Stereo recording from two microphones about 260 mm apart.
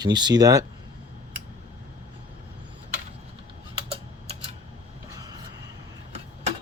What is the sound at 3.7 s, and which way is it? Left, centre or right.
Typing, right.